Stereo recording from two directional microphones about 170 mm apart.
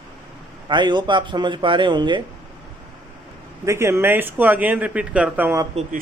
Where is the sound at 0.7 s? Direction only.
25° right (ahead or behind).